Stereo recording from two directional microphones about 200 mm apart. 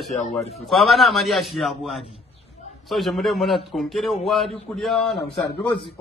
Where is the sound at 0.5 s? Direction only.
Centre (ahead or behind).